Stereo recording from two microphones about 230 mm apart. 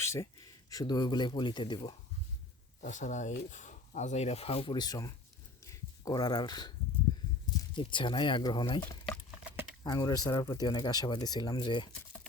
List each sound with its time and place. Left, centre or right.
0.0 s speech: centre
2.8 s speech: left; by 5.1 s centre
5.6 s a sound: centre
7.8 s speech: left
9.0 s patter: centre
9.8 s speech: centre